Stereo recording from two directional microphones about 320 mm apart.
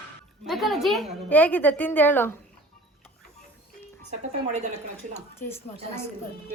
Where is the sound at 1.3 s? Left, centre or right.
Centre.